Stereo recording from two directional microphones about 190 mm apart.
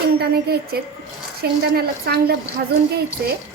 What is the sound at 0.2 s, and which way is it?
A woman's voice, 55° right (ahead or behind).